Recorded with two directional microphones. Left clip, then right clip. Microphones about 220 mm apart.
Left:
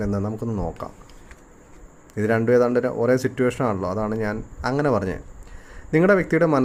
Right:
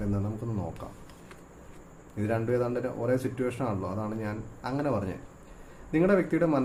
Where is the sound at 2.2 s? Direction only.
45° left (ahead or behind).